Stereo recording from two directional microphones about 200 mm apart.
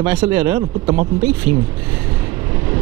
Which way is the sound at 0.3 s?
10° right (ahead or behind).